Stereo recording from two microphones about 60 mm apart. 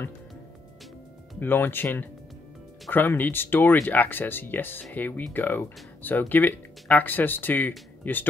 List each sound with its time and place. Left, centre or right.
1.4 s speech: left